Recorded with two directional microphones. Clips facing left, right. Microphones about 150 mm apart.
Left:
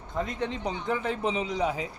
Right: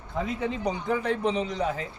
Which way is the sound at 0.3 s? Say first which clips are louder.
Right 3 dB; 5° right (ahead or behind).